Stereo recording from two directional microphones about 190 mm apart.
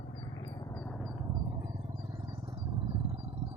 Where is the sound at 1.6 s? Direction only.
20° right (ahead or behind).